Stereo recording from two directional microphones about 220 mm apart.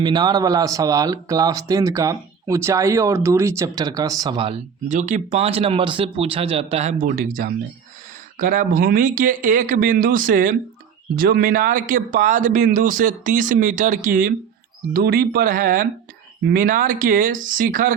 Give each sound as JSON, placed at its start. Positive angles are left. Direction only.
{"t": 0.0, "sound": "speech", "side_deg": -20}